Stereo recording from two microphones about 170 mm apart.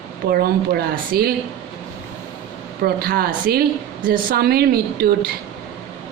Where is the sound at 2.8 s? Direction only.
65° right (ahead or behind).